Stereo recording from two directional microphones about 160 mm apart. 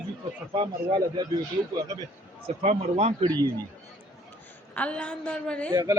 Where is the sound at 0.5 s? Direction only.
30° right (ahead or behind).